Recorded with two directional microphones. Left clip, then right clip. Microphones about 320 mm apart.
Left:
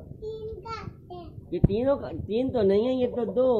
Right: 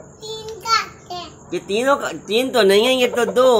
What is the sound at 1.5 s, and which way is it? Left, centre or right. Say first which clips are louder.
Speech: right 7 dB; centre.